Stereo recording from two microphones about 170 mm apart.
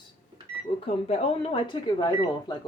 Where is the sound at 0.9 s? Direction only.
35° left (ahead or behind).